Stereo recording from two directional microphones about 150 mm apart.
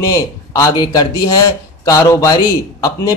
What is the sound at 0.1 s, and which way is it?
A man's voice, 20° left (ahead or behind).